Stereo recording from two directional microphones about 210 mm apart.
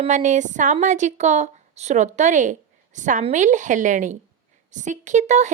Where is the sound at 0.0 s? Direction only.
35° right (ahead or behind).